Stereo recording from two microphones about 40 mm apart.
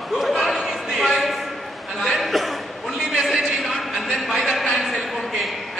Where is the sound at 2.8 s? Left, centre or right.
Centre.